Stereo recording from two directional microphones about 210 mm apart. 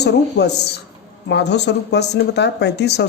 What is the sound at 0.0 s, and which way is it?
A woman's voice, 50° left (ahead or behind).